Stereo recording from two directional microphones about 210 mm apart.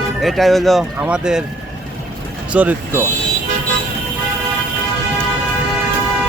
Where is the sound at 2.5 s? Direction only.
5° right (ahead or behind).